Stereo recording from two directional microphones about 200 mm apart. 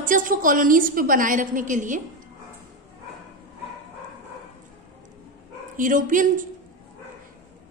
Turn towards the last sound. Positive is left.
turn(degrees=-40)  # may be behind; listen again after turning